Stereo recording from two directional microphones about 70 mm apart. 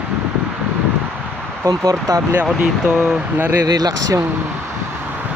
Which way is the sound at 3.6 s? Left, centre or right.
Right.